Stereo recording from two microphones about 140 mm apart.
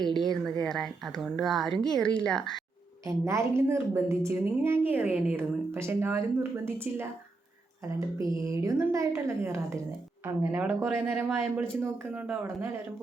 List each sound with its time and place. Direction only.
0.0 s speech: centre (ahead or behind)
3.1 s a woman's voice: 20° right (ahead or behind)
8.3 s a woman's voice: 25° right (ahead or behind)